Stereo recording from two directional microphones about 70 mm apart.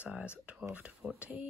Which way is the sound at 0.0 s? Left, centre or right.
Centre.